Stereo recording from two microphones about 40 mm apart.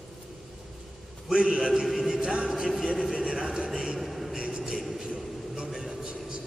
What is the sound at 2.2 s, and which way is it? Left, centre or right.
A man's voice, right.